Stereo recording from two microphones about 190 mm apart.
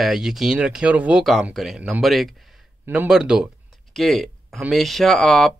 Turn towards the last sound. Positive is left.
turn(degrees=5)  # may be behind; listen again after turning